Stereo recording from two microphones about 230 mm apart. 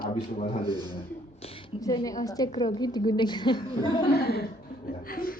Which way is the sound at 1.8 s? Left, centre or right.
Centre.